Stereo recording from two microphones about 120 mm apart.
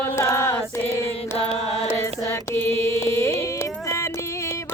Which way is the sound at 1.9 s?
20° left (ahead or behind).